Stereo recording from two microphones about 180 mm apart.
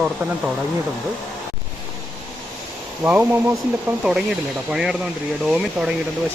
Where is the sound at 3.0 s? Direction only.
10° right (ahead or behind).